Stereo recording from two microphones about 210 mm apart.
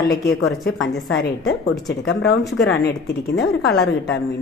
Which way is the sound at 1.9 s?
50° left (ahead or behind).